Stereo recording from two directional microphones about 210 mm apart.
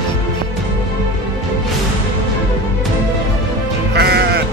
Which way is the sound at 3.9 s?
50° right (ahead or behind).